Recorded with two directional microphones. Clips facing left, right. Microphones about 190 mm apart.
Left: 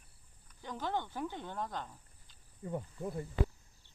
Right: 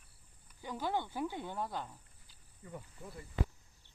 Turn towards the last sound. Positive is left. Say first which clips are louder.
# left 9 dB
turn(degrees=45)  # may be behind; listen again after turning